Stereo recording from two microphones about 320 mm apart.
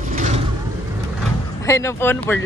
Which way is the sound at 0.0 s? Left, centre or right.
Right.